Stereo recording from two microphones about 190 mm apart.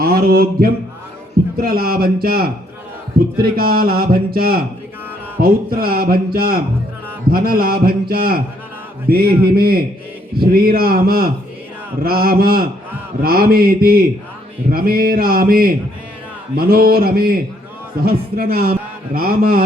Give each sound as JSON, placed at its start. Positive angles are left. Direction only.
{"t": 0.0, "sound": "a man's voice", "side_deg": -50}